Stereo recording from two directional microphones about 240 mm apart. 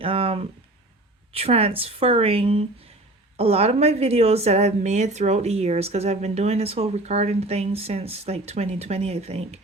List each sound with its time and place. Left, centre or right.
0.0 s a woman's voice: right